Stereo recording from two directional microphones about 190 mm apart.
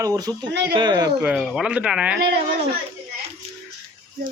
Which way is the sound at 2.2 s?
60° right (ahead or behind).